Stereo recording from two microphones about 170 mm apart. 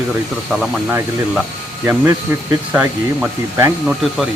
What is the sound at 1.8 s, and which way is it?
Speech, 15° right (ahead or behind).